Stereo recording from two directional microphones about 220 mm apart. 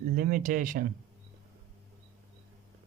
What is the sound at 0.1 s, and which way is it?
Speech, 40° right (ahead or behind).